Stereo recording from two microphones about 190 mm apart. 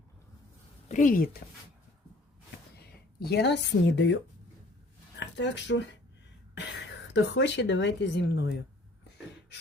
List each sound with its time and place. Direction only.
0.9 s speech: 40° left (ahead or behind)
2.7 s speech: 55° left (ahead or behind)
5.2 s speech: 70° left (ahead or behind)